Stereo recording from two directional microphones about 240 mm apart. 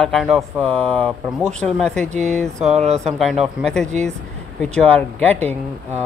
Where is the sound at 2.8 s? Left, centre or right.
Right.